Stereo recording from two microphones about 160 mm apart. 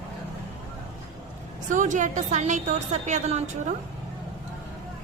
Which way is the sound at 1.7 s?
50° right (ahead or behind).